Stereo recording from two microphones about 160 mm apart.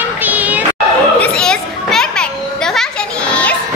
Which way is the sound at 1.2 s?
5° left (ahead or behind).